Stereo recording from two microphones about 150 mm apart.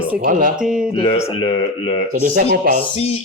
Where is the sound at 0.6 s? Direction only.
5° right (ahead or behind).